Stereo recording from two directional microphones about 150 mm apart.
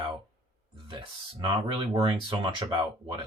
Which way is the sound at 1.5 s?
35° right (ahead or behind).